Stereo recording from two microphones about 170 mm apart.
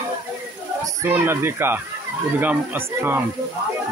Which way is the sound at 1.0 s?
15° right (ahead or behind).